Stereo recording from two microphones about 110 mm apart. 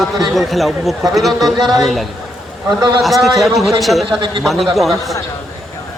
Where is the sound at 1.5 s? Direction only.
40° right (ahead or behind).